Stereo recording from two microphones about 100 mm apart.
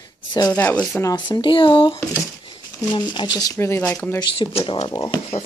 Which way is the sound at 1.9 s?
35° left (ahead or behind).